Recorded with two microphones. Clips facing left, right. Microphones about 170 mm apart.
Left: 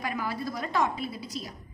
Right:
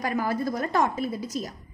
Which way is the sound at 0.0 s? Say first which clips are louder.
Right 6 dB; 45° right (ahead or behind).